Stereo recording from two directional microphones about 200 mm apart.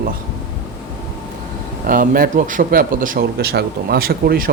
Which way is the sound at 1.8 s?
45° right (ahead or behind).